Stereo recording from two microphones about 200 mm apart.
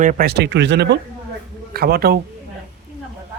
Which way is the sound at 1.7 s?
50° right (ahead or behind).